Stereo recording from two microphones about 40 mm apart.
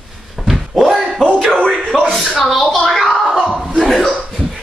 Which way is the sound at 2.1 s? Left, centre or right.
Centre.